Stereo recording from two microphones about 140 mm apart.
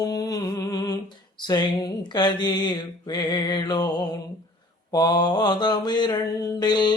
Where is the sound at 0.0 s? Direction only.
25° left (ahead or behind).